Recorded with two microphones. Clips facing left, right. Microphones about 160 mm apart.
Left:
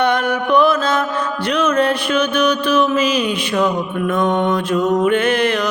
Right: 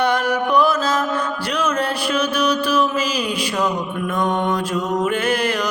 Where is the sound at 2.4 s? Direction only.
60° left (ahead or behind).